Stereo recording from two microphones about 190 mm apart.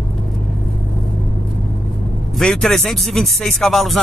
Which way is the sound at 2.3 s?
Centre (ahead or behind).